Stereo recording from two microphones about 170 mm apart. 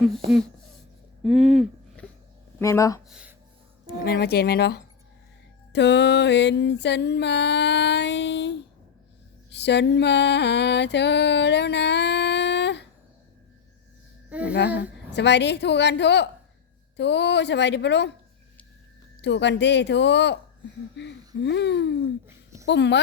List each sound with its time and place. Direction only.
1.2 s speech: 5° right (ahead or behind)
2.6 s speech: 20° left (ahead or behind)
3.1 s a sound: 5° right (ahead or behind)
3.8 s speech: 65° left (ahead or behind)
5.7 s music: 90° left
9.5 s a sound: 90° left
14.3 s a sound: 10° right (ahead or behind)
14.8 s music: 90° left
19.2 s music: 90° left